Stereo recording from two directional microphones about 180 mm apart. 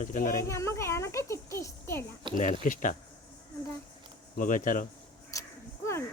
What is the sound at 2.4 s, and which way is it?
Speech, 45° left (ahead or behind).